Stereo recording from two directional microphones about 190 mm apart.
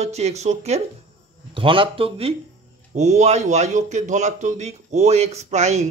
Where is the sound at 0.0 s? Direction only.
35° right (ahead or behind).